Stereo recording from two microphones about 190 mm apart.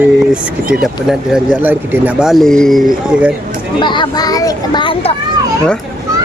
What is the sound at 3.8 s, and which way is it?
Speech, 25° left (ahead or behind).